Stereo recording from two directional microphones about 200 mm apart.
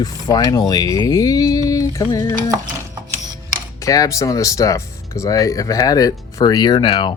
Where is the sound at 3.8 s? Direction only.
15° left (ahead or behind).